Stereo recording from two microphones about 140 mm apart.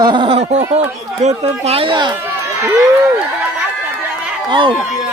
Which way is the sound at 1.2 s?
55° right (ahead or behind).